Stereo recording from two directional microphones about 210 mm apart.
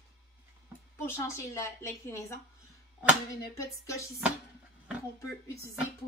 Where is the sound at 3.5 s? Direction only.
15° left (ahead or behind).